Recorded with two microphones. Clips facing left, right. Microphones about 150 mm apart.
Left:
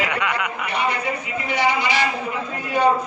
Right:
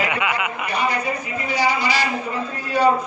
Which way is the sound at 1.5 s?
20° left (ahead or behind).